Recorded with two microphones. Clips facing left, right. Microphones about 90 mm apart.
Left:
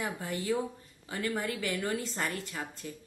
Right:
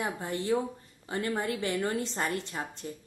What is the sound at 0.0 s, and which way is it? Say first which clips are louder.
A woman's voice: right 2 dB; 25° right (ahead or behind).